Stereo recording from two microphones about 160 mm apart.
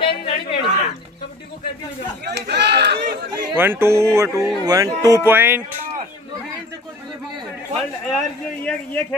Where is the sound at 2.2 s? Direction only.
90° right.